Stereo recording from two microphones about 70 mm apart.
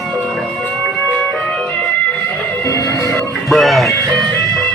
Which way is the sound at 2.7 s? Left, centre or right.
Left.